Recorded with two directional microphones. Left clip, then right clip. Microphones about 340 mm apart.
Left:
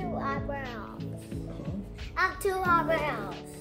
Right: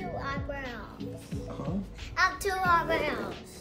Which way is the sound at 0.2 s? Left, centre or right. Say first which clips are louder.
Left 2 dB; centre.